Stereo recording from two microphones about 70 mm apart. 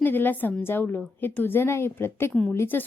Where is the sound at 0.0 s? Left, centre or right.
Left.